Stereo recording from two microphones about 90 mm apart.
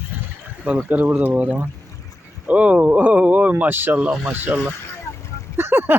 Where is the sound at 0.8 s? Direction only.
20° right (ahead or behind).